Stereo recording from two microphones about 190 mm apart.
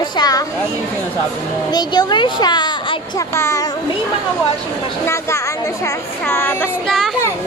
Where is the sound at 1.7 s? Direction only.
20° left (ahead or behind).